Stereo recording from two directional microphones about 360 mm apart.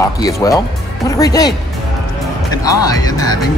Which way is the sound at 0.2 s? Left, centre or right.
Centre.